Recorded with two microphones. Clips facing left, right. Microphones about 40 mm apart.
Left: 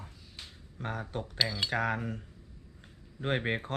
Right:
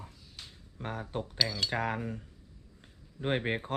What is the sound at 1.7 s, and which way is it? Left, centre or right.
Speech, centre.